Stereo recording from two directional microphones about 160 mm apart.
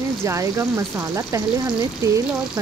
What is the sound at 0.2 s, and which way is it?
Speech, 15° right (ahead or behind).